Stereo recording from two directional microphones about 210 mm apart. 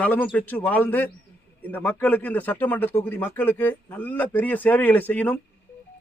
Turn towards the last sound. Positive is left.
turn(degrees=5)  # may be behind; listen again after turning